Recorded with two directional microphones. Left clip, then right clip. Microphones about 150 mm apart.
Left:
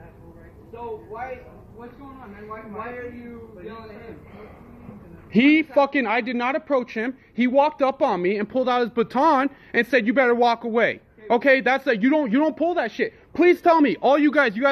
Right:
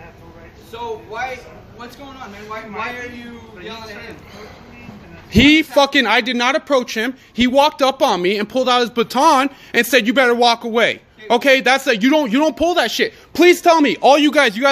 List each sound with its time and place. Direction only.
5.3 s a man's voice: 20° right (ahead or behind)
10.2 s a man's voice: 5° right (ahead or behind)
12.0 s a man's voice: 20° right (ahead or behind)
12.3 s a man's voice: 10° right (ahead or behind)
12.5 s a man's voice: 25° right (ahead or behind)
13.6 s a man's voice: 5° right (ahead or behind)